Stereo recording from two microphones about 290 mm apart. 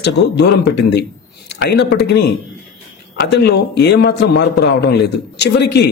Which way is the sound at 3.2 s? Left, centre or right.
Left.